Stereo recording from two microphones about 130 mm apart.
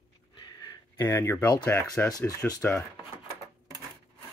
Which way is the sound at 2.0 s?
25° left (ahead or behind).